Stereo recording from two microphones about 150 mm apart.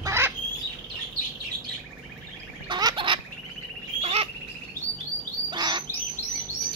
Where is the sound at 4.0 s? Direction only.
45° right (ahead or behind).